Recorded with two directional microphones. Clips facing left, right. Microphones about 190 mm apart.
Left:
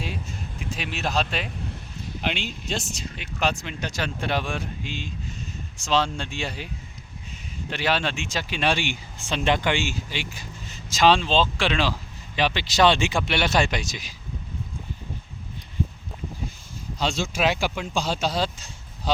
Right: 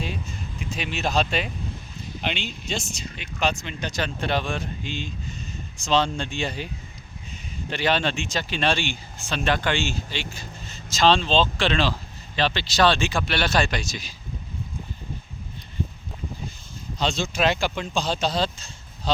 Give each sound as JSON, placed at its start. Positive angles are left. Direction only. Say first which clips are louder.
{"t": 0.7, "sound": "speech", "louder": "right 2 dB", "side_deg": 0}
{"t": 7.7, "sound": "speech", "louder": "right 2 dB", "side_deg": 5}
{"t": 17.0, "sound": "speech", "louder": "right 1 dB", "side_deg": 10}